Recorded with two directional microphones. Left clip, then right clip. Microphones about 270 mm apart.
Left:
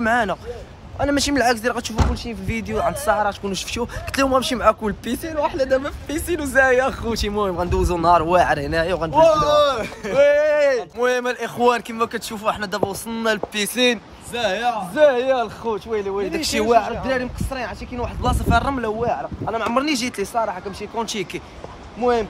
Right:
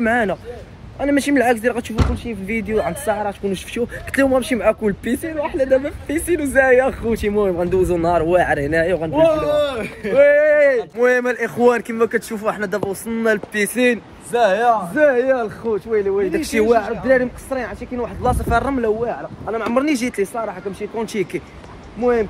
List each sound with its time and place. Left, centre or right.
0.0 s speech: centre
10.1 s speech: centre
14.3 s speech: centre
15.0 s speech: centre
20.3 s speech: centre
21.0 s speech: centre